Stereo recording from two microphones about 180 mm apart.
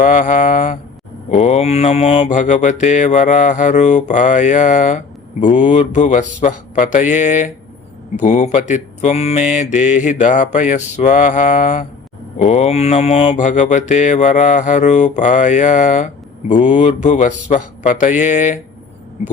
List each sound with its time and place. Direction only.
0.0 s mantra: 45° left (ahead or behind)